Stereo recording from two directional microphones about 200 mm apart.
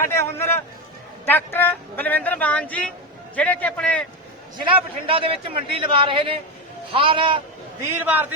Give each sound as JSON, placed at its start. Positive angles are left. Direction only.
{"t": 0.1, "sound": "a man's voice", "side_deg": 10}
{"t": 4.6, "sound": "a man's voice", "side_deg": -25}
{"t": 8.0, "sound": "a man's voice", "side_deg": -10}